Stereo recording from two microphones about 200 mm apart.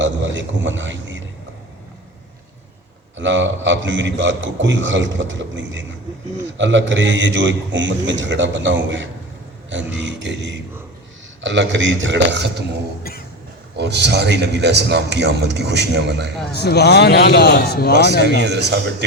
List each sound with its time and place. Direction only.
0.0 s a man's voice: 65° right (ahead or behind)
3.2 s a man's voice: 65° right (ahead or behind)
13.0 s a sound: 50° left (ahead or behind)
13.7 s a man's voice: 60° right (ahead or behind)
16.5 s a man's voice: 55° left (ahead or behind)
18.3 s a man's voice: 60° right (ahead or behind)